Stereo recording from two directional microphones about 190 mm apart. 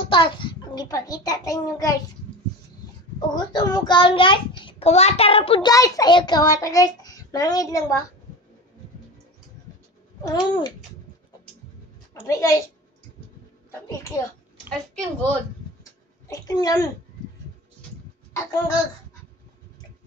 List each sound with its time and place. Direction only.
0.1 s a child's voice: 25° left (ahead or behind)
3.2 s a child's voice: 20° left (ahead or behind)
10.2 s a child's voice: 25° left (ahead or behind)
12.1 s a child's voice: 15° left (ahead or behind)
13.7 s a child's voice: 15° left (ahead or behind)
14.7 s a woman's voice: 5° left (ahead or behind)
15.8 s a sound: 20° left (ahead or behind)